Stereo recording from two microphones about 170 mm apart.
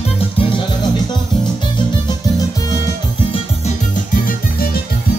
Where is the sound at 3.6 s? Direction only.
50° left (ahead or behind).